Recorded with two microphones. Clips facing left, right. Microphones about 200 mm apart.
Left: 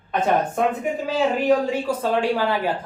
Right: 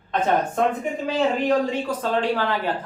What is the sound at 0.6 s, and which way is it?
A woman's voice, 10° left (ahead or behind).